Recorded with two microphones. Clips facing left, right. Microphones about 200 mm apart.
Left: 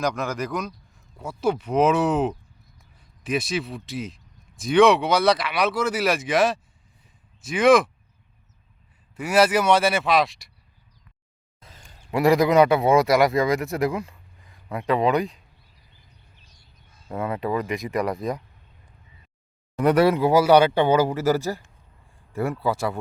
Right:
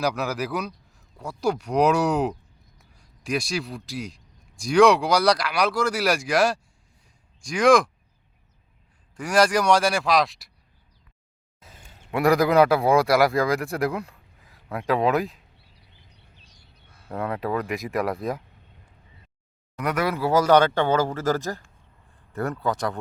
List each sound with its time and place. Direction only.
0.0 s speech: 5° right (ahead or behind)
9.1 s speech: 5° left (ahead or behind)
11.6 s a man's voice: 5° right (ahead or behind)
17.1 s speech: centre (ahead or behind)
19.7 s speech: 30° left (ahead or behind)
20.1 s speech: 15° left (ahead or behind)